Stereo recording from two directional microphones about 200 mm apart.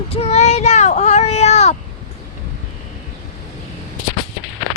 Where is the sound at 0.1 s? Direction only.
30° left (ahead or behind).